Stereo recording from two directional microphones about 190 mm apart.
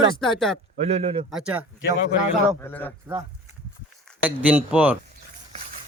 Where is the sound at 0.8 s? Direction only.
35° right (ahead or behind).